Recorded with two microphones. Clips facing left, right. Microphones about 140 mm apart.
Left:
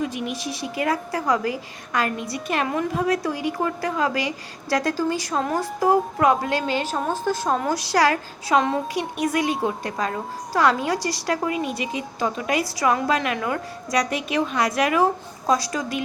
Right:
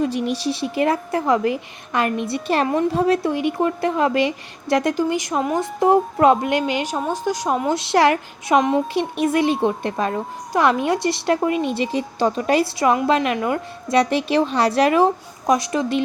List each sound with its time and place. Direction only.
0.0 s a woman's voice: 35° right (ahead or behind); by 7.7 s 15° right (ahead or behind)
7.7 s a woman's voice: 25° right (ahead or behind)